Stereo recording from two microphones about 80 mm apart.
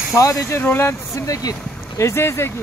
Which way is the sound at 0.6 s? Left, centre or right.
Left.